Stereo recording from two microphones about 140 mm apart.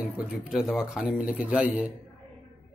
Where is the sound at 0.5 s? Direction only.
5° right (ahead or behind).